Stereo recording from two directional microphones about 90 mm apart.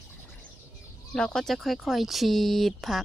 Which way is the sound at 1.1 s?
5° left (ahead or behind).